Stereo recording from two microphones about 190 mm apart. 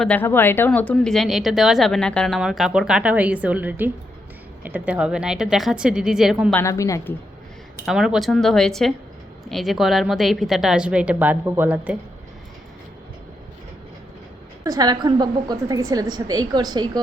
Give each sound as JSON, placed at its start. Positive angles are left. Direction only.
{"t": 0.0, "sound": "speech", "side_deg": 10}
{"t": 6.5, "sound": "a woman's voice", "side_deg": 15}
{"t": 7.9, "sound": "speech", "side_deg": -5}
{"t": 14.6, "sound": "a woman's voice", "side_deg": -20}